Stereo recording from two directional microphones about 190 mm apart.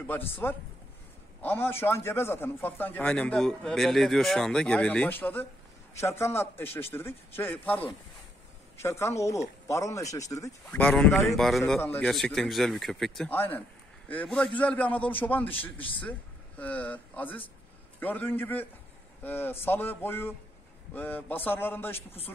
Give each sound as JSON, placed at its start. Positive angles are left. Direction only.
{"t": 0.4, "sound": "a man's voice", "side_deg": 10}
{"t": 10.8, "sound": "a man's voice", "side_deg": 5}
{"t": 21.9, "sound": "a man's voice", "side_deg": 30}